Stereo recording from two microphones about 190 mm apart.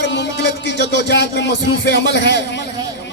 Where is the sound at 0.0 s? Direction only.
65° left (ahead or behind).